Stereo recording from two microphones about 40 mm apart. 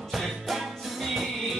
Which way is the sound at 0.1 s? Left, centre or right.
Centre.